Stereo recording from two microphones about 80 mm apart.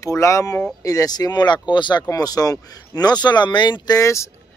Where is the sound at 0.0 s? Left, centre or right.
Left.